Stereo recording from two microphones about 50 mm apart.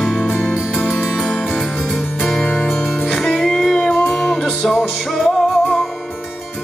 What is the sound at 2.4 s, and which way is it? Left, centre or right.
Music, left.